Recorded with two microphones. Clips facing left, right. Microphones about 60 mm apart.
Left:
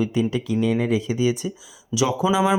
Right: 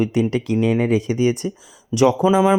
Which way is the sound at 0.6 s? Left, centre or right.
Right.